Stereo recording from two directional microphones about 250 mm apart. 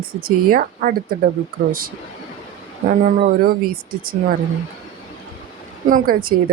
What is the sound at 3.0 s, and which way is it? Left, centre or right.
Speech, right.